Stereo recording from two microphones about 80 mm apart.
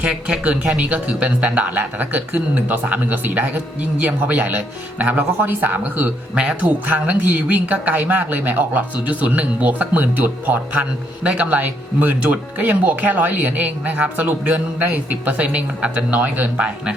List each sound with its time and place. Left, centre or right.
0.0 s speech: centre